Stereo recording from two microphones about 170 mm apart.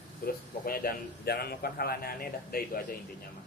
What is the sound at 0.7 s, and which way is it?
A man's voice, 65° left (ahead or behind).